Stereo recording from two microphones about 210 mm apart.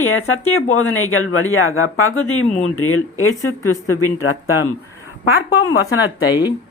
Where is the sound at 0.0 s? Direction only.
75° left (ahead or behind); by 4.7 s 90° left.